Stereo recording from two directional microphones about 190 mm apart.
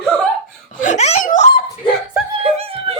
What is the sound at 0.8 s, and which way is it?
Speech, 40° left (ahead or behind).